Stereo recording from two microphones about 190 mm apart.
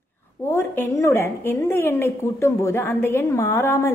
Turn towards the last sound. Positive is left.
turn(degrees=15)  # may be behind; listen again after turning